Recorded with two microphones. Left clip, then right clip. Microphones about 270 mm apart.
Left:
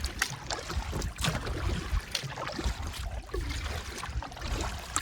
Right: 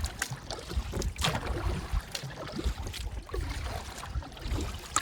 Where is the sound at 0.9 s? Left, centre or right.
Right.